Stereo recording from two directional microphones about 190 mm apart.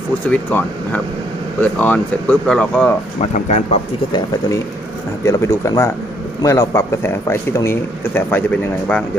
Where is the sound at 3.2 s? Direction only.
35° left (ahead or behind).